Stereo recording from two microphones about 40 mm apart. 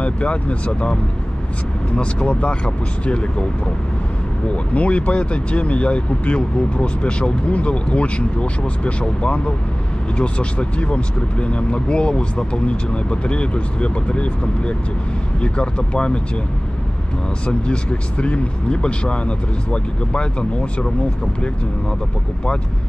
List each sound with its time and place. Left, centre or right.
0.0 s speech: left
2.0 s speech: left
4.7 s speech: left
17.5 s speech: left